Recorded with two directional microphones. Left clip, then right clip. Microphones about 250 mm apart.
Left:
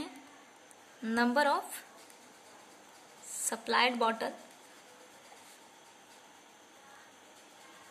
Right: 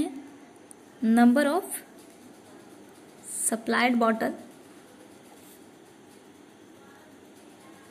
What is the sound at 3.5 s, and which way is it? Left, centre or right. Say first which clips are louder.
Speech: right 4 dB; centre.